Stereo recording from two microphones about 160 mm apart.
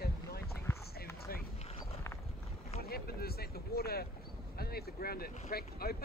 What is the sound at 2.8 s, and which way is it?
Speech, 75° left (ahead or behind).